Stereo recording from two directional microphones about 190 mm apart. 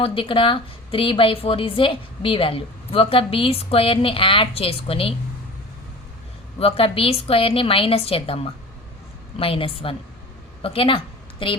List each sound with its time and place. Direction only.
0.0 s a woman's voice: 25° left (ahead or behind)
6.6 s a woman's voice: 30° left (ahead or behind)
9.4 s a woman's voice: 30° left (ahead or behind)